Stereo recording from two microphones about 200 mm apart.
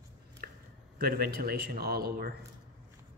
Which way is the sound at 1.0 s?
50° right (ahead or behind).